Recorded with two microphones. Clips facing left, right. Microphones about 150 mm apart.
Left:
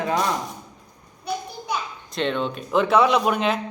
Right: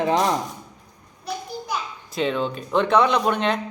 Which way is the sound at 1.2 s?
Centre (ahead or behind).